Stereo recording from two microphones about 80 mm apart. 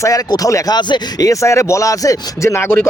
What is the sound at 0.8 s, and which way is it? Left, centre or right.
Speech, left.